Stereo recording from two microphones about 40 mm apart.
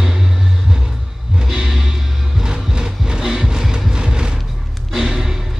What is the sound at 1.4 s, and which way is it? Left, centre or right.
Music, centre.